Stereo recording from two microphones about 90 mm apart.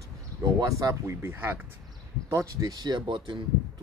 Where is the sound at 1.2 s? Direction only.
25° right (ahead or behind).